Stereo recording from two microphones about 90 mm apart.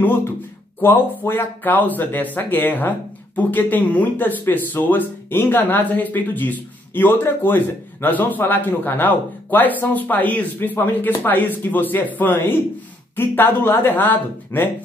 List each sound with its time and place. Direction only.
0.0 s speech: 25° left (ahead or behind)